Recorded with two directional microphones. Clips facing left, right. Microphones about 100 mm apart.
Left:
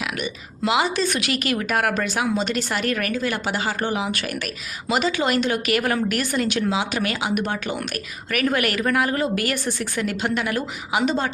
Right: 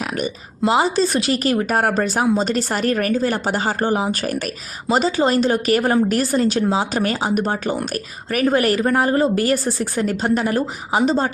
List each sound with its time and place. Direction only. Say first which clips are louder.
0.0 s a woman's voice: right 4 dB; 40° right (ahead or behind)